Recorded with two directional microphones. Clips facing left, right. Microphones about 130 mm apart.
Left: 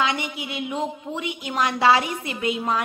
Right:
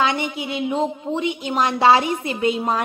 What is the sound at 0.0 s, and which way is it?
A woman's voice, 30° right (ahead or behind).